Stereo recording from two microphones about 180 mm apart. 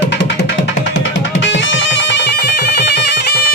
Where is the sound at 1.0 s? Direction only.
90° left.